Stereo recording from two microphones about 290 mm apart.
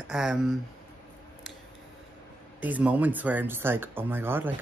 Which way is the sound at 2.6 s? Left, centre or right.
Centre.